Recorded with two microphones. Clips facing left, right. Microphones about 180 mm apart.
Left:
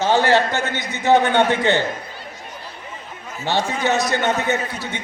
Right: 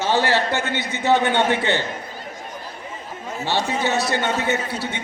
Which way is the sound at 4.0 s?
15° left (ahead or behind).